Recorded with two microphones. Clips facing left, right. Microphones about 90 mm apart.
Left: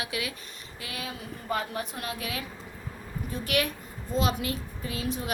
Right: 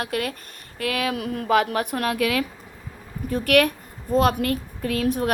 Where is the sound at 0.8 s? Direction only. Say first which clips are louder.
Right 13 dB; 65° right (ahead or behind).